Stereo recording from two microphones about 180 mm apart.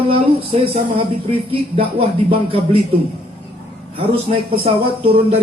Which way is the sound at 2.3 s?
30° right (ahead or behind).